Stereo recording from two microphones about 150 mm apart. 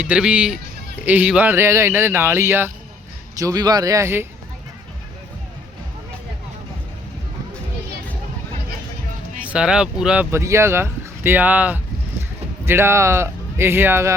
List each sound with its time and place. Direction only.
0.0 s speech: 10° right (ahead or behind)
9.5 s speech: 5° right (ahead or behind)
10.3 s speech: 20° right (ahead or behind)